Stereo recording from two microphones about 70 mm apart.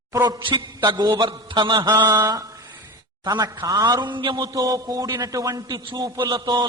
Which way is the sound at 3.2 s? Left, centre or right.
Right.